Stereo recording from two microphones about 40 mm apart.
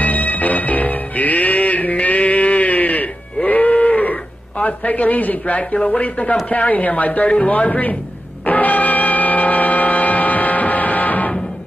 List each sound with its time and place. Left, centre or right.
0.0 s music: left
3.4 s livestock: left
5.9 s speech: left
8.5 s music: left